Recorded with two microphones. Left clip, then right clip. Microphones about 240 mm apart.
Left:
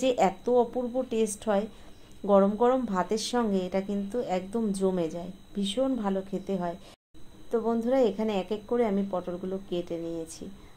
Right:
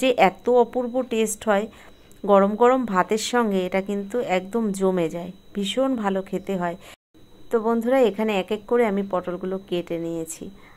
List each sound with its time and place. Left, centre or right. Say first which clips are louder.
0.0 s a woman's voice: right 7 dB; right